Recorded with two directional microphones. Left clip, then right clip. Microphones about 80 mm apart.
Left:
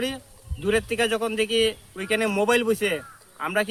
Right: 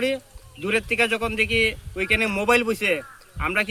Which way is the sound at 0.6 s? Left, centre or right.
Left.